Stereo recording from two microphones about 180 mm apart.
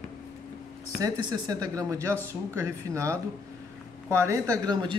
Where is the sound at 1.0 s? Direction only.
20° right (ahead or behind).